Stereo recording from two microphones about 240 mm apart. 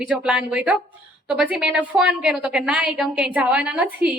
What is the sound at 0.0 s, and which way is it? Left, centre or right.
A woman's voice, centre.